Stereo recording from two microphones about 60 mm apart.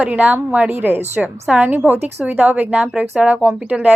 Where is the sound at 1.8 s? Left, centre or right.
Right.